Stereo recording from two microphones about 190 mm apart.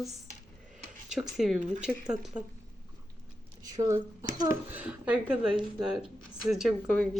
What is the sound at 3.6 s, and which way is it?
Speech, 20° right (ahead or behind).